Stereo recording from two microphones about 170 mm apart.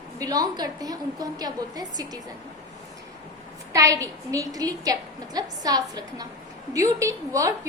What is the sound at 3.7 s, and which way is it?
A woman's voice, 20° right (ahead or behind).